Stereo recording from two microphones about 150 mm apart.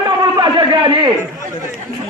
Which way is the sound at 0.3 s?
30° right (ahead or behind).